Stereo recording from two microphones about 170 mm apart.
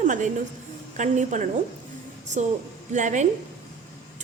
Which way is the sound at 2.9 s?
45° right (ahead or behind).